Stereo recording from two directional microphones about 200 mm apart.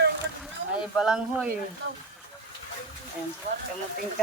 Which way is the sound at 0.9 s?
5° right (ahead or behind).